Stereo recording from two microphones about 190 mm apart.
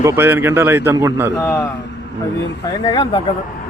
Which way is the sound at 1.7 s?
65° left (ahead or behind).